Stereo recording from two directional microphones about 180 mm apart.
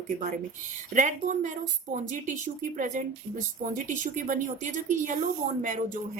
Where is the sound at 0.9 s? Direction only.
45° right (ahead or behind).